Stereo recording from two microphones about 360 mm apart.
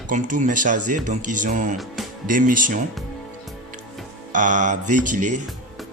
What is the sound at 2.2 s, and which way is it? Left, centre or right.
Speech, right.